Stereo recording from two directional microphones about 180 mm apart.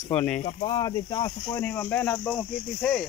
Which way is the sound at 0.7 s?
25° left (ahead or behind).